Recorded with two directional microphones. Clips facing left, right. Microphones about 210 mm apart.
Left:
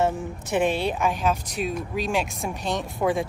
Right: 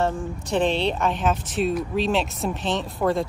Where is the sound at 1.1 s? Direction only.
Centre (ahead or behind).